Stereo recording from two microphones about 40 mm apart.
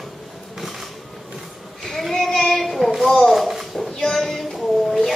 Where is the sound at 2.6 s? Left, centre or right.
Centre.